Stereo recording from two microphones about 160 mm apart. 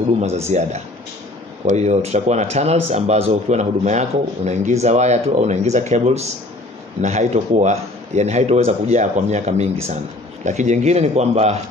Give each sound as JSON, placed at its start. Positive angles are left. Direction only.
{"t": 0.5, "sound": "speech", "side_deg": -45}